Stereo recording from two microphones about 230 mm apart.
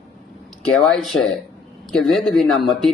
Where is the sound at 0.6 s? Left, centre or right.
Centre.